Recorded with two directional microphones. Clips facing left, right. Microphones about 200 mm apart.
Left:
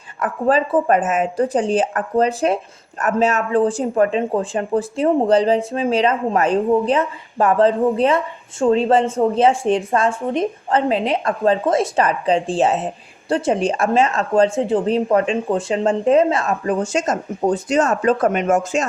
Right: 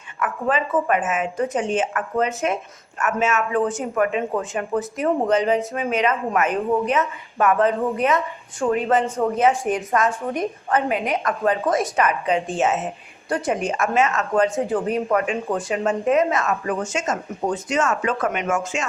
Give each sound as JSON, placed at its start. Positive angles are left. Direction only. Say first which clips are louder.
{"t": 0.2, "sound": "speech", "louder": "left 5 dB", "side_deg": 35}